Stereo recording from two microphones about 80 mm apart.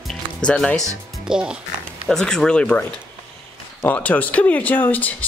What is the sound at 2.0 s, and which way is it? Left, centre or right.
A man's voice, centre.